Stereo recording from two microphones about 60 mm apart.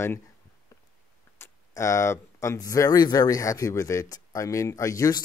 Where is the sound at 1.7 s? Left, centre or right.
Left.